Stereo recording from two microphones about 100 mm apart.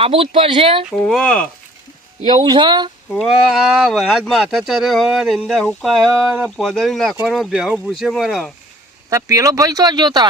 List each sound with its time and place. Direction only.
0.0 s speech: 70° right (ahead or behind)
0.9 s speech: 10° left (ahead or behind)
2.3 s speech: 50° right (ahead or behind)
3.2 s speech: centre (ahead or behind)
9.0 s speech: 35° right (ahead or behind)